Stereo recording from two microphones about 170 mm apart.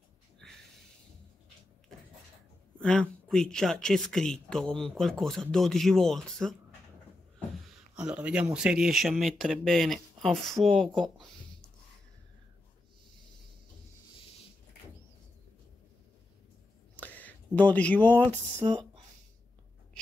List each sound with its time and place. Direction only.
2.8 s speech: 5° left (ahead or behind)
7.9 s speech: 5° right (ahead or behind)
16.9 s a sound: 10° left (ahead or behind)
18.6 s speech: 30° right (ahead or behind)